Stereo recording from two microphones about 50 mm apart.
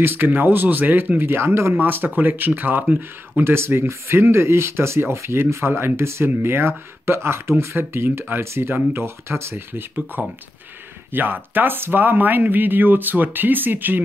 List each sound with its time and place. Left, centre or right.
0.0 s a man's voice: right
1.8 s a man's voice: right
3.3 s a man's voice: right